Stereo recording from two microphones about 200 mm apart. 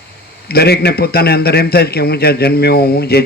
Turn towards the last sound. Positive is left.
turn(degrees=50)  # may be behind; listen again after turning